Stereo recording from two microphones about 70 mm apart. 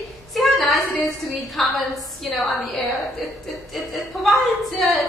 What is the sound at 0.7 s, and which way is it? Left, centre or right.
Speech, left.